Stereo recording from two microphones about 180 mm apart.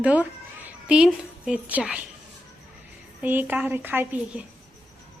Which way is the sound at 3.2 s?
10° right (ahead or behind).